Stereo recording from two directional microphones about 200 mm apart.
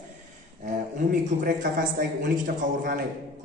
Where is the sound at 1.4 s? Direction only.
45° right (ahead or behind).